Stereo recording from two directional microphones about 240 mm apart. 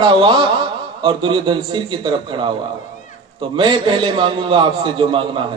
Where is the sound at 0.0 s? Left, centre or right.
Centre.